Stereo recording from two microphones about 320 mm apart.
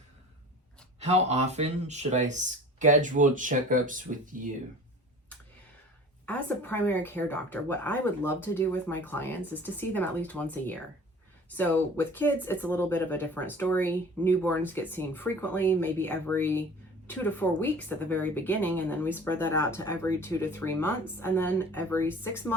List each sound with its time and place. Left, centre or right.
0.9 s speech: centre
6.2 s speech: centre